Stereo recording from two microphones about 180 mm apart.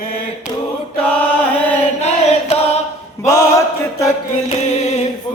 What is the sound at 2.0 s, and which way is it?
Singing, 35° left (ahead or behind).